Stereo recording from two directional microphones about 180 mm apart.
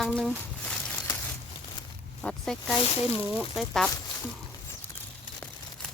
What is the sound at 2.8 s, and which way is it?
Speech, 35° left (ahead or behind).